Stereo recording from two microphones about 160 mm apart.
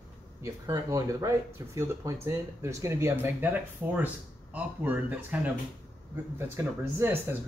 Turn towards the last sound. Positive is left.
turn(degrees=-15)  # may be behind; listen again after turning